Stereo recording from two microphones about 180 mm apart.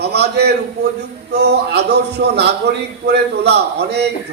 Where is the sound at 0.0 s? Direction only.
65° right (ahead or behind).